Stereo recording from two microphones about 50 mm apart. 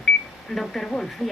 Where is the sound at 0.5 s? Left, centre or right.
Centre.